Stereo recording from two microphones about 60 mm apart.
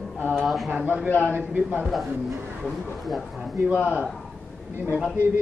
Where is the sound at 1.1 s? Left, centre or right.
Left.